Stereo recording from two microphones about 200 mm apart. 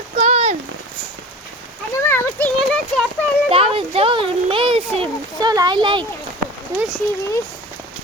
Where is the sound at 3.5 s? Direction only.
30° right (ahead or behind).